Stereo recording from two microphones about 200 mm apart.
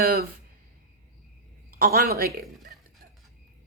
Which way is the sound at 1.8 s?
50° right (ahead or behind).